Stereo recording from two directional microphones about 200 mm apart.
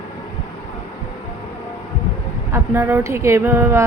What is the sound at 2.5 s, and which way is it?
A woman's voice, 10° right (ahead or behind).